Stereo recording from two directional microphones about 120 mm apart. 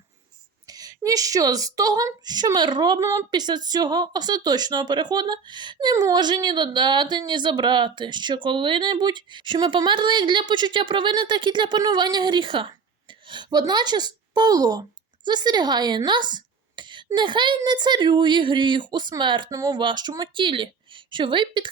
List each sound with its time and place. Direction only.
0.7 s a woman's voice: 30° right (ahead or behind)